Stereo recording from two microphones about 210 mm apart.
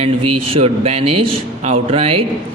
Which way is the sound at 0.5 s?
30° right (ahead or behind).